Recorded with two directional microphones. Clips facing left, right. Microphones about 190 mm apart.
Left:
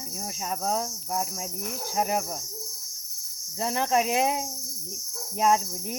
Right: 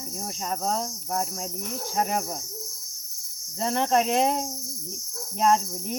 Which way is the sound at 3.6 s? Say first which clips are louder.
Right 2 dB; 5° left (ahead or behind).